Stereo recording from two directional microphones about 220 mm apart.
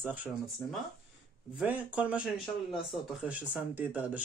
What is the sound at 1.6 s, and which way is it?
Speech, 5° right (ahead or behind).